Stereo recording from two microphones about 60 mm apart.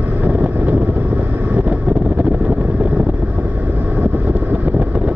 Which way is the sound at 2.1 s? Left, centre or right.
Right.